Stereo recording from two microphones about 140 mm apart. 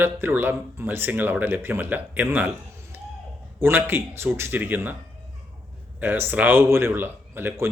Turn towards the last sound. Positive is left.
turn(degrees=-15)  # may be behind; listen again after turning